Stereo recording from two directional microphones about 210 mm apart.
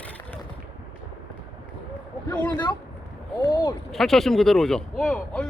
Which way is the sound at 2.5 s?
20° left (ahead or behind).